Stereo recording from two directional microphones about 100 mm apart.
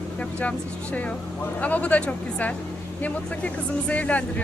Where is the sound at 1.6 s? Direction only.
15° left (ahead or behind).